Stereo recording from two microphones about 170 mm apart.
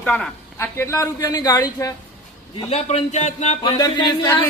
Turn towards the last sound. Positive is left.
turn(degrees=20)  # may be behind; listen again after turning